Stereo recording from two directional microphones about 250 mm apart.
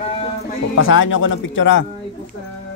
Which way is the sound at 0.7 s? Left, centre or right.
Left.